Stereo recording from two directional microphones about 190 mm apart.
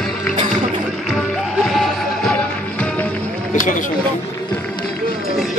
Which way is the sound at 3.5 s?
45° left (ahead or behind).